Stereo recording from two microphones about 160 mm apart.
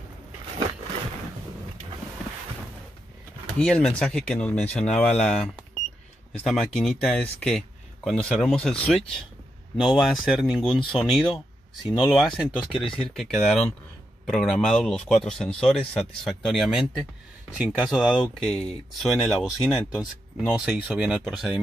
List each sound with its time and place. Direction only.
3.5 s speech: 5° left (ahead or behind)
6.4 s speech: centre (ahead or behind)
12.7 s speech: 35° left (ahead or behind)
13.1 s speech: centre (ahead or behind)